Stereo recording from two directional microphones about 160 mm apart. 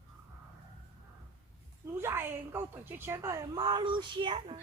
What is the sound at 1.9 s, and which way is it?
A woman's voice, 15° right (ahead or behind).